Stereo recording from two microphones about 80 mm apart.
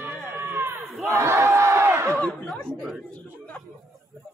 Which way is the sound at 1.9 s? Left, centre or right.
Right.